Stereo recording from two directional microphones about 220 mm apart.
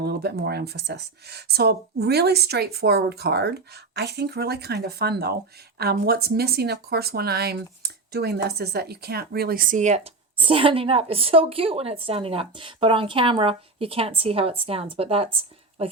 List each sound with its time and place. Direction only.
0.0 s speech: 45° right (ahead or behind); by 15.9 s 25° right (ahead or behind)